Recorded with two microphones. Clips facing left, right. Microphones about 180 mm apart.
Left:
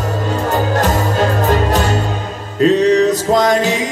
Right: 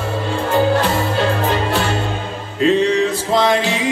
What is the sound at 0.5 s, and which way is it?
Music, 45° left (ahead or behind).